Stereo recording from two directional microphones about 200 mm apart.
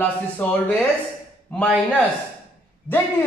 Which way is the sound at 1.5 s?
5° left (ahead or behind).